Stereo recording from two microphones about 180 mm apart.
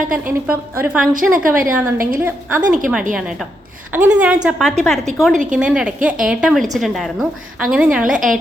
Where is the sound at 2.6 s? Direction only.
50° right (ahead or behind).